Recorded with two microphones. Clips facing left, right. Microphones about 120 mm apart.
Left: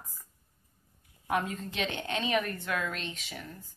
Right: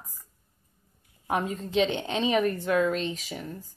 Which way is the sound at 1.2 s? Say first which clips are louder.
Right 2 dB; 30° right (ahead or behind).